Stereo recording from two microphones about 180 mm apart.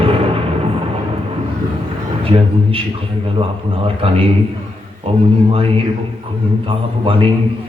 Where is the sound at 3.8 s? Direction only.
30° right (ahead or behind).